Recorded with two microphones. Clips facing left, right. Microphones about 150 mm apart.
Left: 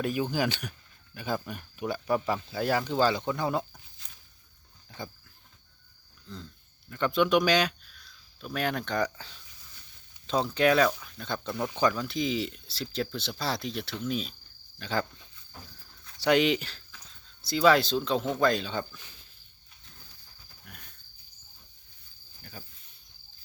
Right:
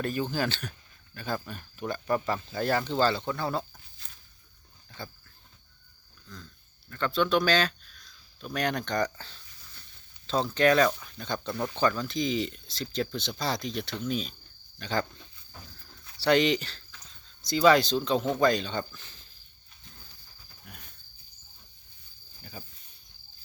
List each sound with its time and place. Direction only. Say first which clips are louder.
0.0 s speech: left 1 dB; 10° left (ahead or behind)
6.2 s a sound: left 4 dB; 25° left (ahead or behind)
6.9 s speech: left 2 dB; 15° left (ahead or behind)
16.2 s speech: even; 10° left (ahead or behind)
20.7 s cricket: right 1 dB; centre (ahead or behind)
22.4 s cricket: right 2 dB; 5° right (ahead or behind)